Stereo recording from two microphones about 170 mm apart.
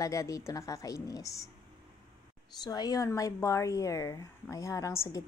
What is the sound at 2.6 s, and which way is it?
A woman's voice, 20° left (ahead or behind).